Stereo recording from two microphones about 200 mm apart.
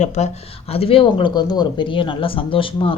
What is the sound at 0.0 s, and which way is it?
Speech, 35° left (ahead or behind).